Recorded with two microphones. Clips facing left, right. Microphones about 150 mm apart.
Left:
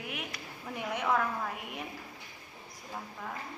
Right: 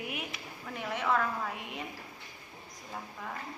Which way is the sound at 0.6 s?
15° left (ahead or behind).